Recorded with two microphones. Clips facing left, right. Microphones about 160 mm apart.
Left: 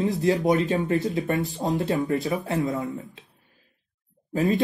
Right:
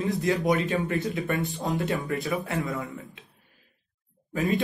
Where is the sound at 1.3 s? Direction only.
35° left (ahead or behind).